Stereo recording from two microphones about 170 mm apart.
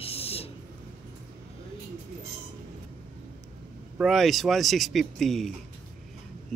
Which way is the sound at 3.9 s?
Centre (ahead or behind).